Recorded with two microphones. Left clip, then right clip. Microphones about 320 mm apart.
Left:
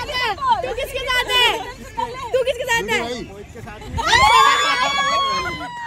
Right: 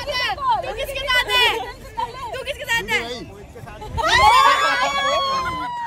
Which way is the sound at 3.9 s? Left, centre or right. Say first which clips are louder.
Even; centre.